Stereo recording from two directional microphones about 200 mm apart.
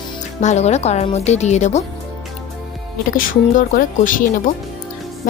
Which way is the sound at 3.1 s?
40° left (ahead or behind).